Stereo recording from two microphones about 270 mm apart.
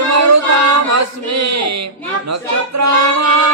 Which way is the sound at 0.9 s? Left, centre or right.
Right.